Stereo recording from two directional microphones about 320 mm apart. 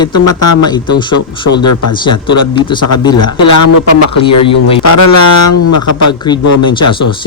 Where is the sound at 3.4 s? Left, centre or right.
Left.